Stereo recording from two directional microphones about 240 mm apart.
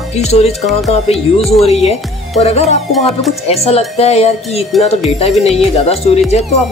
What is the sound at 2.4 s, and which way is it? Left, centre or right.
Speech, left.